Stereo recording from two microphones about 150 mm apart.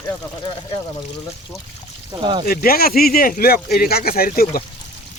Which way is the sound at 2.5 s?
90° left.